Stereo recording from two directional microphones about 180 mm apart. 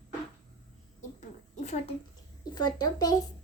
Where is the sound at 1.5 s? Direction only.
40° left (ahead or behind).